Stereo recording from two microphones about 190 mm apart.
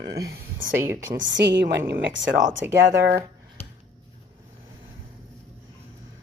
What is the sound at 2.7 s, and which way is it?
Speech, 60° right (ahead or behind).